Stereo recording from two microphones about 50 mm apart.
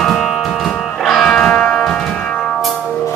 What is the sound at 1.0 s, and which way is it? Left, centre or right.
Music, centre.